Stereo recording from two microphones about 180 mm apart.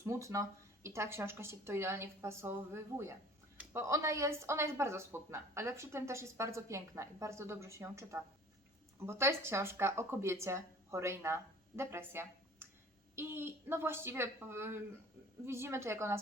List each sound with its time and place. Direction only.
0.0 s speech: 15° right (ahead or behind)